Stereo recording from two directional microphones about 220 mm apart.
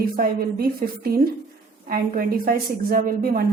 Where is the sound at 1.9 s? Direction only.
40° right (ahead or behind).